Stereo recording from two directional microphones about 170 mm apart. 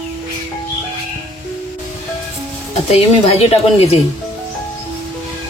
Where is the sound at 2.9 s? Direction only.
35° left (ahead or behind).